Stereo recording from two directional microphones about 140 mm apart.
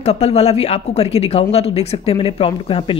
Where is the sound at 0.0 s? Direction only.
50° left (ahead or behind).